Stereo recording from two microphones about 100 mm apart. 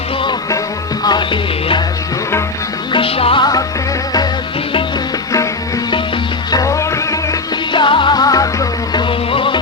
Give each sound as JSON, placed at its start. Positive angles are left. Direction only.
{"t": 1.0, "sound": "music", "side_deg": 45}
{"t": 2.9, "sound": "music", "side_deg": 70}
{"t": 6.5, "sound": "music", "side_deg": 35}
{"t": 7.7, "sound": "music", "side_deg": 55}